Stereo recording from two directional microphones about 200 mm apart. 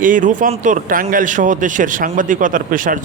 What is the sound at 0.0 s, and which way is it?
Speech, 40° right (ahead or behind).